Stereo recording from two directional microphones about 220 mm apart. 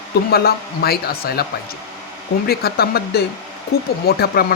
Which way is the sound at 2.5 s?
45° left (ahead or behind).